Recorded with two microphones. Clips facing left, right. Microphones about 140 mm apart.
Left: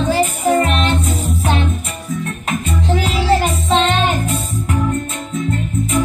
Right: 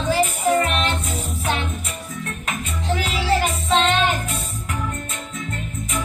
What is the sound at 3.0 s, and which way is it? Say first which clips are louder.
Music: left 5 dB; 30° left (ahead or behind).